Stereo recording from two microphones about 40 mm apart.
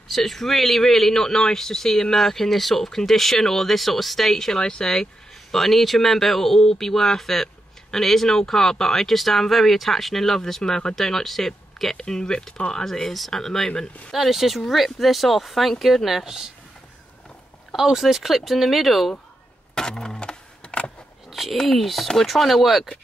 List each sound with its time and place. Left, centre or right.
0.1 s speech: centre
14.1 s speech: centre
16.3 s speech: centre
17.7 s speech: centre
19.7 s keys jangling: centre
21.3 s a sound: centre
21.6 s speech: centre